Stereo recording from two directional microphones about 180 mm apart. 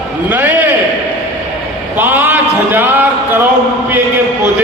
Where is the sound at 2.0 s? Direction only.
10° right (ahead or behind).